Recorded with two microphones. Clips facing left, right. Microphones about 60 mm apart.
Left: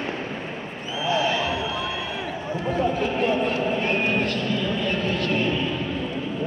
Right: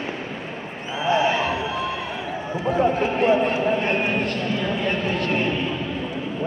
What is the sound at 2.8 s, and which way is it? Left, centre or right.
Speech, right.